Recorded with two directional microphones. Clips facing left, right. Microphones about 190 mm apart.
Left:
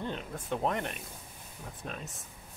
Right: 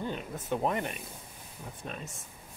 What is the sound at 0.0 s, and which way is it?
Speech, 5° right (ahead or behind).